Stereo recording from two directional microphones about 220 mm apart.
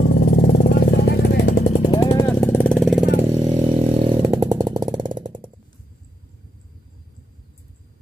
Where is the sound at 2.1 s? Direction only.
10° left (ahead or behind).